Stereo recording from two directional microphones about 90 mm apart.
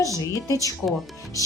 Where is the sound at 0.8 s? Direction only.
25° left (ahead or behind).